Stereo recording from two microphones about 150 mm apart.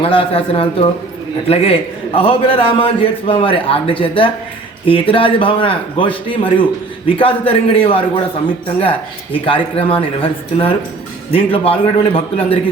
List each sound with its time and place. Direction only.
0.0 s a man's voice: 40° left (ahead or behind)
11.3 s a man's voice: 40° left (ahead or behind)